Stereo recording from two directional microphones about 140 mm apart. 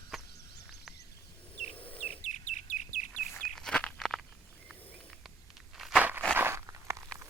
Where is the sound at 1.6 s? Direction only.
40° left (ahead or behind); by 3.1 s 60° left (ahead or behind).